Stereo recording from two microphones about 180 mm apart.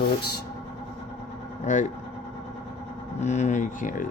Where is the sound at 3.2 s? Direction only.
40° left (ahead or behind).